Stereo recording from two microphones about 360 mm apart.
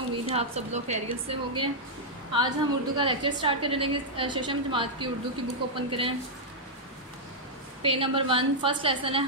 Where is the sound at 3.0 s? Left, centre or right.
Centre.